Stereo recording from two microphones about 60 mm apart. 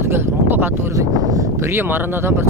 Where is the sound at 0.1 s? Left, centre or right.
Right.